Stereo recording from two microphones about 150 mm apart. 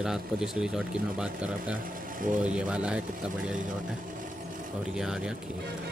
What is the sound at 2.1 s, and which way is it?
Speech, 65° right (ahead or behind).